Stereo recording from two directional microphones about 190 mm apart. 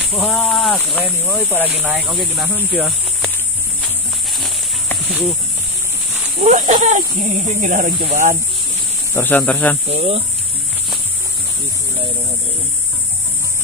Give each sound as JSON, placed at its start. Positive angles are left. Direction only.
{"t": 0.1, "sound": "speech", "side_deg": 0}
{"t": 1.5, "sound": "speech", "side_deg": -10}
{"t": 4.3, "sound": "a sound", "side_deg": 0}
{"t": 6.4, "sound": "speech", "side_deg": -45}
{"t": 9.1, "sound": "speech", "side_deg": 10}
{"t": 9.8, "sound": "speech", "side_deg": -35}